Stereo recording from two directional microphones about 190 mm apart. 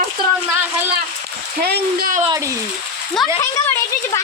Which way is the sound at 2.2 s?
20° right (ahead or behind).